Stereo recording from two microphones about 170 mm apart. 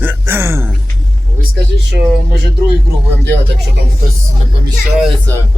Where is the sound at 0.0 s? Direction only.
10° right (ahead or behind).